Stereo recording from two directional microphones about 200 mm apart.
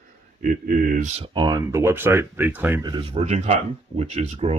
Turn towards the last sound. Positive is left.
turn(degrees=-30)  # may be behind; listen again after turning